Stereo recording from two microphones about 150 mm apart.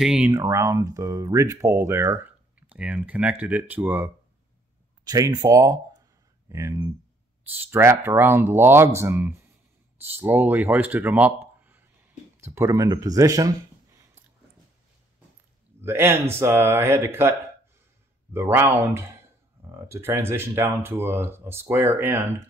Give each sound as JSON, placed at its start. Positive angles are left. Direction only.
{"t": 0.0, "sound": "speech", "side_deg": -5}
{"t": 0.3, "sound": "speech", "side_deg": -20}
{"t": 5.0, "sound": "speech", "side_deg": -25}
{"t": 15.8, "sound": "speech", "side_deg": -15}